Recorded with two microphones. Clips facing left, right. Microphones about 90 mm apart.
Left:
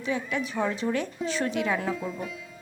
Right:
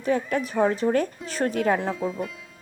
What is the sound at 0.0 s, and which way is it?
Speech, 45° right (ahead or behind).